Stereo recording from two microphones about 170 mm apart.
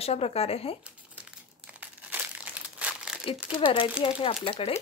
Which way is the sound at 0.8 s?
5° right (ahead or behind).